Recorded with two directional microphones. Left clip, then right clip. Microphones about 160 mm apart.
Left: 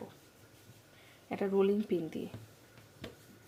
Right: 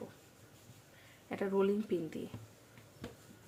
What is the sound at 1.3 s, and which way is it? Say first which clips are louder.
Speech: left 3 dB; 10° left (ahead or behind).